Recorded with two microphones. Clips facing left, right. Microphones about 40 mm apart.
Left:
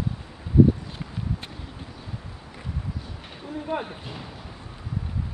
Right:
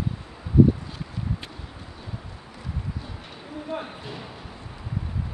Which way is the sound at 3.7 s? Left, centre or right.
Centre.